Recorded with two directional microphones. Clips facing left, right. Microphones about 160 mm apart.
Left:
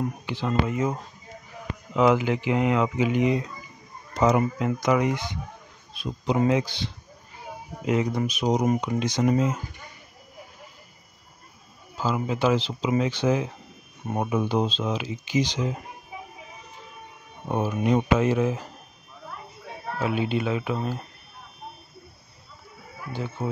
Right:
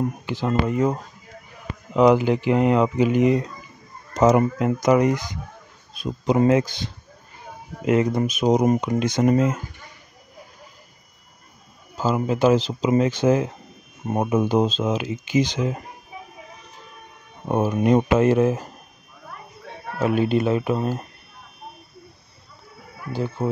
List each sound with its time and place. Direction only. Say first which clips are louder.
0.3 s speech: right 3 dB; 45° right (ahead or behind)
2.0 s speech: right 4 dB; 40° right (ahead or behind)
7.8 s speech: right 5 dB; 60° right (ahead or behind)
12.0 s speech: right 5 dB; 45° right (ahead or behind)
17.5 s speech: right 5 dB; 50° right (ahead or behind)
20.0 s speech: right 6 dB; 45° right (ahead or behind)
23.1 s speech: right 6 dB; 35° right (ahead or behind)